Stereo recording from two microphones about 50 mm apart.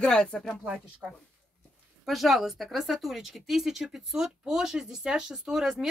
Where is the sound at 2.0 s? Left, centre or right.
Centre.